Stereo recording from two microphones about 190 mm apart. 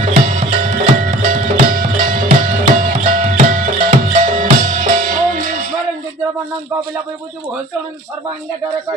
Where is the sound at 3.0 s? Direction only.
45° right (ahead or behind).